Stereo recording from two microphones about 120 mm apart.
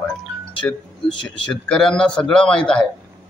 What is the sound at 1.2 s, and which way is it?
A man's voice, 5° left (ahead or behind).